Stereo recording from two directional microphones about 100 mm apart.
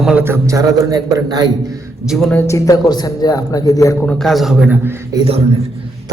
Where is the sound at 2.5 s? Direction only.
35° left (ahead or behind).